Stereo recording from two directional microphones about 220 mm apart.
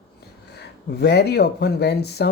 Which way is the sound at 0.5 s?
50° left (ahead or behind).